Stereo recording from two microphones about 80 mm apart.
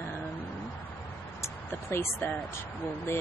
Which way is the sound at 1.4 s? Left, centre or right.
Left.